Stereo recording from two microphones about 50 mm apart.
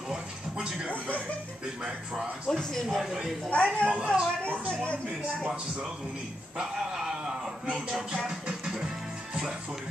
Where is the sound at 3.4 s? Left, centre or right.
Left.